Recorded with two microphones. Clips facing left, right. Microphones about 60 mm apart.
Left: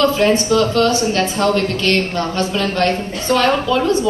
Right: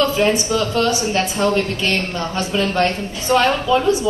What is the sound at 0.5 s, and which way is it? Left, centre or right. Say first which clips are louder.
Speech: left 4 dB; right.